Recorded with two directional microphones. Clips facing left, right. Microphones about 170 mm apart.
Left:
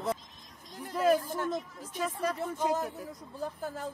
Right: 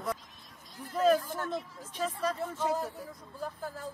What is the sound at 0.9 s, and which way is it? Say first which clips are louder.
Speech: even; 10° left (ahead or behind).